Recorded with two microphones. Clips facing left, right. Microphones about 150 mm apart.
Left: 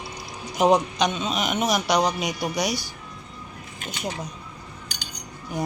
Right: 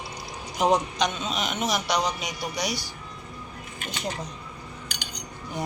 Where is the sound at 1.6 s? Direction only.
45° left (ahead or behind).